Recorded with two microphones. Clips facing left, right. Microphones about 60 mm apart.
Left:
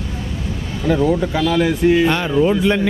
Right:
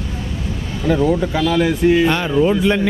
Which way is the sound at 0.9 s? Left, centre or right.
Right.